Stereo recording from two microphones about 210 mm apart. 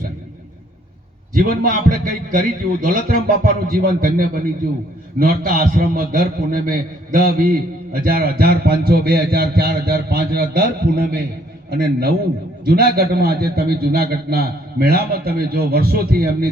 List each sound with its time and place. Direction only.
1.3 s a man's voice: 45° right (ahead or behind)